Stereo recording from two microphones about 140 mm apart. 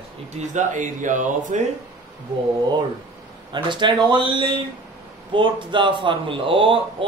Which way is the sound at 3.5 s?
35° right (ahead or behind).